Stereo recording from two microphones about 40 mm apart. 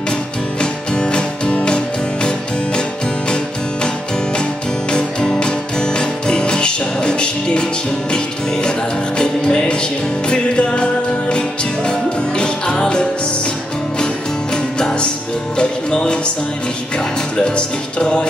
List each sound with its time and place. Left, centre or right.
0.6 s music: left
5.2 s music: centre
17.6 s music: left